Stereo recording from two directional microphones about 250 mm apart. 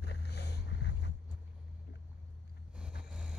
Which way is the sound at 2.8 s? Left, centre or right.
Centre.